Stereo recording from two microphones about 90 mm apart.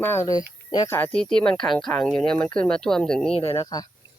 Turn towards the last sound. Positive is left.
turn(degrees=45)  # may be behind; listen again after turning